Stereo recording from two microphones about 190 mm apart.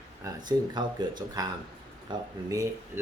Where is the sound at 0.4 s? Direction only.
20° right (ahead or behind).